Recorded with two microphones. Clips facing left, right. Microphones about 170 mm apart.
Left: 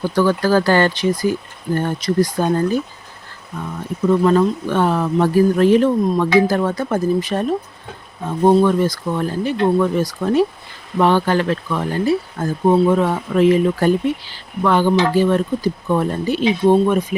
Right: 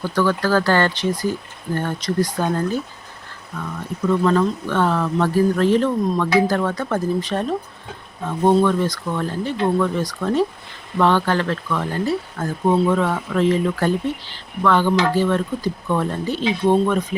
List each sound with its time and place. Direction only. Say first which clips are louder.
0.0 s speech: left 3 dB; 15° left (ahead or behind)
12.7 s speech: left 3 dB; 25° left (ahead or behind)
13.0 s speech: left 4 dB; 10° left (ahead or behind)